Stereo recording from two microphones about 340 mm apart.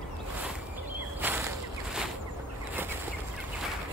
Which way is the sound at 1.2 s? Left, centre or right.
Centre.